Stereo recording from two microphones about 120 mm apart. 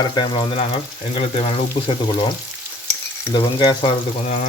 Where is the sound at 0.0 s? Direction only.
40° left (ahead or behind).